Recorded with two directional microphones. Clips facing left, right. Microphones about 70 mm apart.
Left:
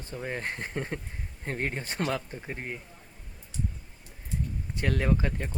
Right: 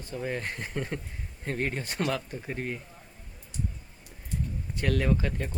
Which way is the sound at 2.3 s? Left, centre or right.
Centre.